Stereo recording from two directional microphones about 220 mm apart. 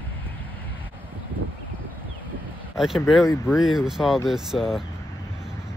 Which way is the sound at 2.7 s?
Centre (ahead or behind).